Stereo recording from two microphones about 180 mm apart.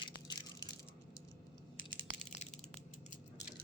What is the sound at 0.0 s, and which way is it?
Crushing, 25° left (ahead or behind).